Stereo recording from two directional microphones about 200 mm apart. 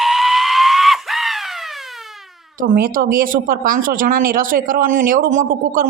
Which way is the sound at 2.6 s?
45° right (ahead or behind).